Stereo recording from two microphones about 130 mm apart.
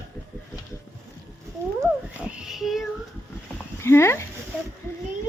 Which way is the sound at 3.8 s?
20° left (ahead or behind).